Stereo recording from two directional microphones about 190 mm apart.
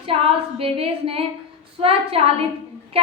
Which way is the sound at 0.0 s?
30° right (ahead or behind).